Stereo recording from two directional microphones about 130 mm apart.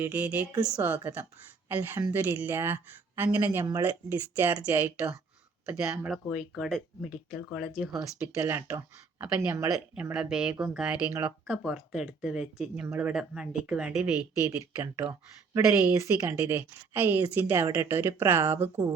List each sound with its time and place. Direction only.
0.0 s a woman's voice: 15° right (ahead or behind)
8.4 s a woman's voice: 20° right (ahead or behind)
14.3 s a woman's voice: 25° right (ahead or behind)